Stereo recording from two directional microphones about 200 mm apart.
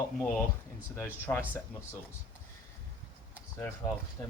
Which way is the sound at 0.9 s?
10° left (ahead or behind).